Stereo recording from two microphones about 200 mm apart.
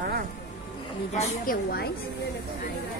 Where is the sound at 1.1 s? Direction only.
45° left (ahead or behind).